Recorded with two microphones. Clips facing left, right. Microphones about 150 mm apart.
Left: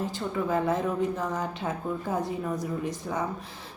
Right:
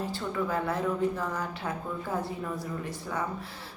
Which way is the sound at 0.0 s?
20° left (ahead or behind).